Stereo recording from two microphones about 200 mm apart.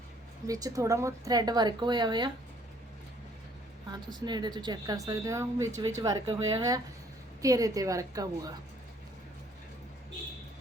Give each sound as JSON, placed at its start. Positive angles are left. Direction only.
{"t": 0.4, "sound": "a woman's voice", "side_deg": -15}
{"t": 4.1, "sound": "speech", "side_deg": -20}